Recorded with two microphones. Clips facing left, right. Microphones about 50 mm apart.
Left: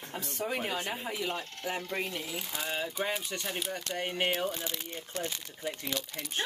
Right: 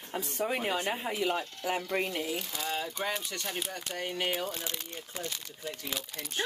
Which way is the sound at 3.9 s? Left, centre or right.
Left.